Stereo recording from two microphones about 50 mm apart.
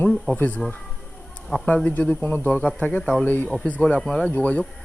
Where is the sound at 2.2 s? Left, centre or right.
Left.